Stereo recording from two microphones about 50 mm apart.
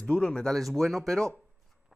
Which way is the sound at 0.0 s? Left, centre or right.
Centre.